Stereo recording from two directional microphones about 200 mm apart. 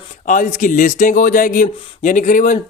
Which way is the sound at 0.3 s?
40° left (ahead or behind).